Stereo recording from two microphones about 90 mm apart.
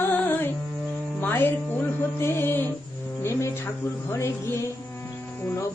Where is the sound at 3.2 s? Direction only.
30° left (ahead or behind).